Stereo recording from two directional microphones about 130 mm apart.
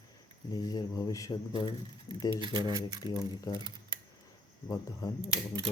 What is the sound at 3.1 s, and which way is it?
Speech, 25° left (ahead or behind).